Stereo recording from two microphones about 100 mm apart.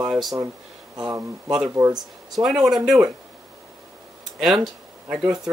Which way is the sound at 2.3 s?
5° right (ahead or behind).